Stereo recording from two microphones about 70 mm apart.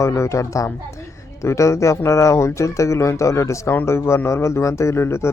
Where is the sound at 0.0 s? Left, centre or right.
Left.